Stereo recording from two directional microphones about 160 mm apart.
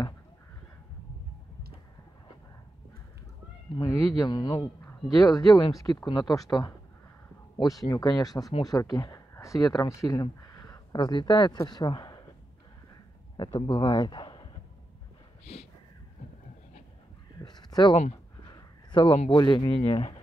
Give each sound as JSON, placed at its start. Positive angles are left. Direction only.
{"t": 3.7, "sound": "speech", "side_deg": 25}
{"t": 13.4, "sound": "speech", "side_deg": 30}
{"t": 17.4, "sound": "a sound", "side_deg": 25}
{"t": 19.3, "sound": "speech", "side_deg": 25}